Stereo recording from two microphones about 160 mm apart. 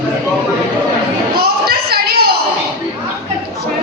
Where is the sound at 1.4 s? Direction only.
75° right (ahead or behind).